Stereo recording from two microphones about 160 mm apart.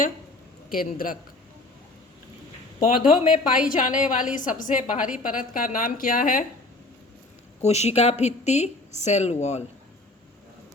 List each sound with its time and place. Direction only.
0.7 s a woman's voice: 60° left (ahead or behind)
2.8 s a woman's voice: 55° left (ahead or behind)
7.6 s a woman's voice: 40° left (ahead or behind)